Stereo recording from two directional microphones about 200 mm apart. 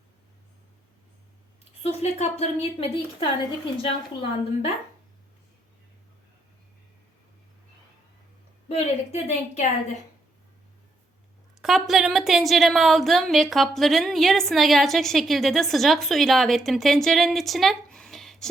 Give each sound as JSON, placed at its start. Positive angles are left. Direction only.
{"t": 1.8, "sound": "a woman's voice", "side_deg": 35}
{"t": 3.8, "sound": "a woman's voice", "side_deg": 30}
{"t": 8.7, "sound": "a woman's voice", "side_deg": 35}
{"t": 11.6, "sound": "a woman's voice", "side_deg": 0}